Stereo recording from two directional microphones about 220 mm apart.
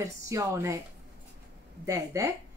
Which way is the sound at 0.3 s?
15° right (ahead or behind).